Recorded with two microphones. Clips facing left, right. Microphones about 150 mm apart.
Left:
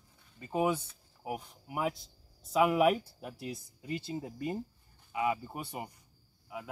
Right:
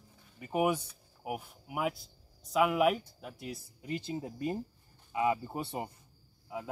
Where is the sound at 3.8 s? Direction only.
20° right (ahead or behind).